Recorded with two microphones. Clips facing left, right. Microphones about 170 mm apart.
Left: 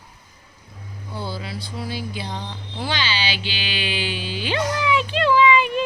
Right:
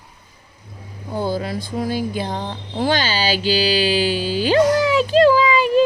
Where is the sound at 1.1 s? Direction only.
45° right (ahead or behind).